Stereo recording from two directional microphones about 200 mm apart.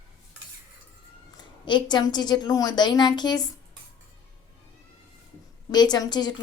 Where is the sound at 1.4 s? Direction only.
20° left (ahead or behind).